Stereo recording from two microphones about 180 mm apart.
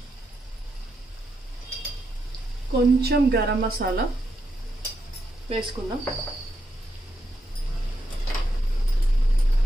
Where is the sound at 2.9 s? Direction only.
65° right (ahead or behind).